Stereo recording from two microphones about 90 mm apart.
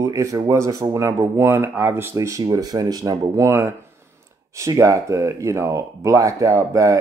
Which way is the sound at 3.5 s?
30° right (ahead or behind).